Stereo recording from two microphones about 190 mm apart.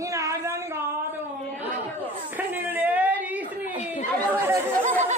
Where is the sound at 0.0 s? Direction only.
15° right (ahead or behind).